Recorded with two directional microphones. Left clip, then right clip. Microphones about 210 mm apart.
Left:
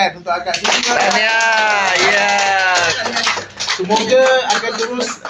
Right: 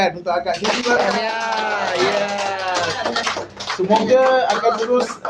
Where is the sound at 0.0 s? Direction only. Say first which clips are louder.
Left 2 dB; 55° right (ahead or behind).